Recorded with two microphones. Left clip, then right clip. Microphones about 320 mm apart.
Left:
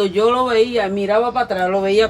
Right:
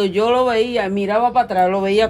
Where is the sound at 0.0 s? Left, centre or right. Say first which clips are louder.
Even; centre.